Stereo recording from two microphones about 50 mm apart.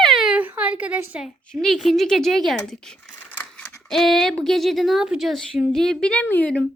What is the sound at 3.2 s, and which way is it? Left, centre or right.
Scissors, left.